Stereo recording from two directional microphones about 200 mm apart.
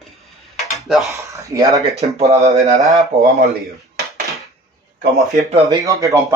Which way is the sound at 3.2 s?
50° right (ahead or behind).